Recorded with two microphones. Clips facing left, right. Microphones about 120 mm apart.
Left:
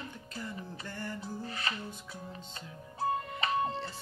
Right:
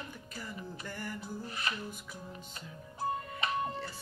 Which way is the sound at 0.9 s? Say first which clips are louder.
Left 2 dB; 10° right (ahead or behind).